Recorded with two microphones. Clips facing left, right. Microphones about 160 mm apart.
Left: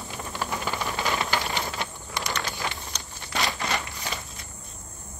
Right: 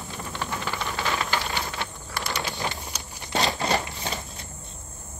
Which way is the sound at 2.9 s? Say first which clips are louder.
Right 1 dB; 10° right (ahead or behind).